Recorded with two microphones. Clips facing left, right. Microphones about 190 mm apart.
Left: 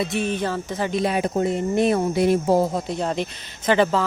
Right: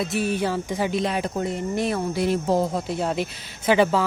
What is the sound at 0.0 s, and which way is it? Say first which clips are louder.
Speech: even; 5° right (ahead or behind).